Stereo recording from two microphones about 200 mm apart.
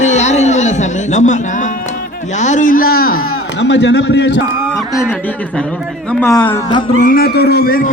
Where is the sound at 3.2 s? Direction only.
60° left (ahead or behind).